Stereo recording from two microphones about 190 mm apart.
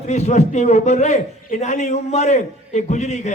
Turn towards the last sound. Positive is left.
turn(degrees=35)  # may be behind; listen again after turning